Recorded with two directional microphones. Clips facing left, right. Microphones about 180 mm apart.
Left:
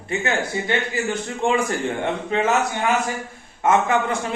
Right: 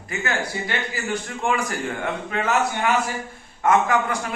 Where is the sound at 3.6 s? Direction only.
25° left (ahead or behind).